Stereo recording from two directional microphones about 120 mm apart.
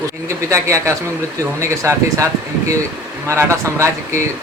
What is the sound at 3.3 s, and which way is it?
Speech, 25° right (ahead or behind).